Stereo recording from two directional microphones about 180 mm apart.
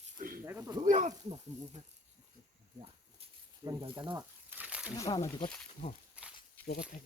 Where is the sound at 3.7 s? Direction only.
25° right (ahead or behind).